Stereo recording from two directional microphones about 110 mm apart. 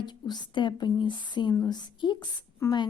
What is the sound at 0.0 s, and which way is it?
Speech, 40° left (ahead or behind).